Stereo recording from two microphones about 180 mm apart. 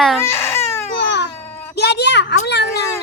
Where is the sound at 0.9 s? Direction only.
75° left (ahead or behind).